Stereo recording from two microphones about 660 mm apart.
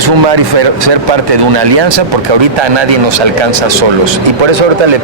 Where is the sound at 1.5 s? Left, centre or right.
Right.